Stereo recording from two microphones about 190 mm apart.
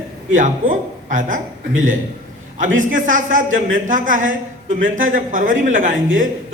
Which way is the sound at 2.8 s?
45° right (ahead or behind).